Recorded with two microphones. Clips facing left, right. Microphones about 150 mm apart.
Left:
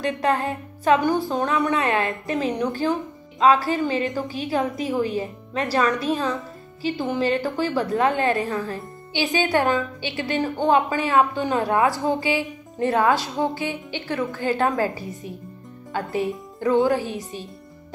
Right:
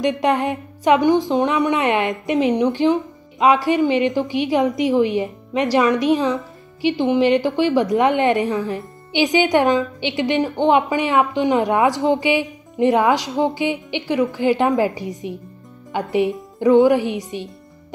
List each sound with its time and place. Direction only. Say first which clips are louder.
0.0 s a woman's voice: right 4 dB; 15° right (ahead or behind)